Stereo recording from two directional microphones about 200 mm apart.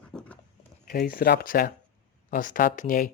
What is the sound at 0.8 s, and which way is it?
Speech, 45° left (ahead or behind).